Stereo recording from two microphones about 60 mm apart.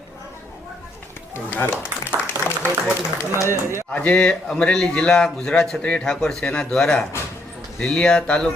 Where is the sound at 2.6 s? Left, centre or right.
Left.